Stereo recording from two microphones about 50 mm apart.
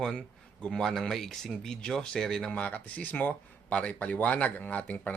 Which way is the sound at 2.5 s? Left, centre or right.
Left.